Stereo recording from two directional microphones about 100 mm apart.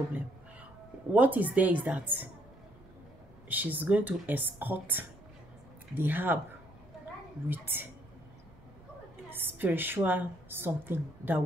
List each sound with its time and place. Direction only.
1.1 s speech: 15° right (ahead or behind)
3.4 s a woman's voice: 15° right (ahead or behind)
7.4 s a woman's voice: 20° right (ahead or behind)
9.3 s a woman's voice: 20° right (ahead or behind)